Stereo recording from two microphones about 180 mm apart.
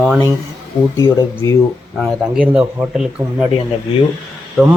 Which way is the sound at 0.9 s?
15° left (ahead or behind).